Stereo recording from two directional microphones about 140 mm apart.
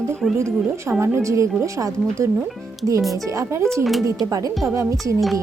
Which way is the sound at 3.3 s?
20° right (ahead or behind).